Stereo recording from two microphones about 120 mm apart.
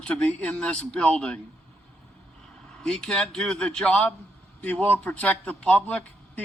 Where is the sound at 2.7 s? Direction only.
5° left (ahead or behind).